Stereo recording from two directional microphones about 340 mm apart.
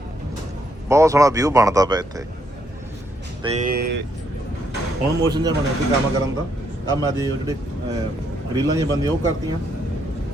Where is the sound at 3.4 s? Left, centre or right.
Right.